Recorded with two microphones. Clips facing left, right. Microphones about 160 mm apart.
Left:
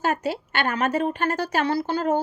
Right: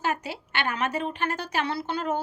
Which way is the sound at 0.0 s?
45° left (ahead or behind).